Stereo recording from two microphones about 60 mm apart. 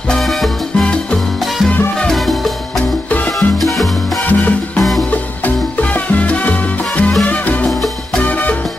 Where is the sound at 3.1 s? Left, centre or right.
Left.